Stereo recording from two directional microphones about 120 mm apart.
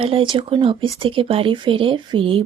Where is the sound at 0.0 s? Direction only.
45° right (ahead or behind).